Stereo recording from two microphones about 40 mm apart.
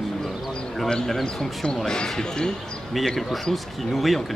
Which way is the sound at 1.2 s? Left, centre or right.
Centre.